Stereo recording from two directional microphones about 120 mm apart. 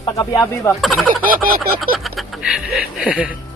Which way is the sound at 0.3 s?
25° left (ahead or behind).